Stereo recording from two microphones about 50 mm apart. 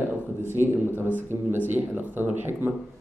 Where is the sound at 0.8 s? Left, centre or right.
Right.